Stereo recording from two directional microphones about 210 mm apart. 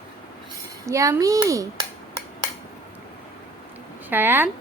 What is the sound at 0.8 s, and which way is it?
Dishes, 15° right (ahead or behind).